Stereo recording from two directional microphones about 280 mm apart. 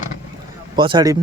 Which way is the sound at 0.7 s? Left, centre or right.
Centre.